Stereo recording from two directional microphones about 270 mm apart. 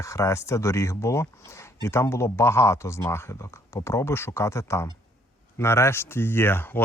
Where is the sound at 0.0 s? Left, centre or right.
Centre.